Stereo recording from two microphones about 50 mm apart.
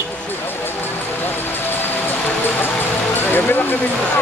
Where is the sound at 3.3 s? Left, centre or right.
Left.